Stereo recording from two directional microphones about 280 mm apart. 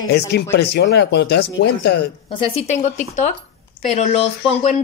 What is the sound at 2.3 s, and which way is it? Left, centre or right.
A woman's voice, centre.